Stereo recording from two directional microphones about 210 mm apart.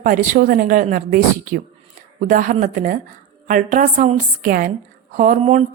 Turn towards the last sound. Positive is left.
turn(degrees=-35)  # may be behind; listen again after turning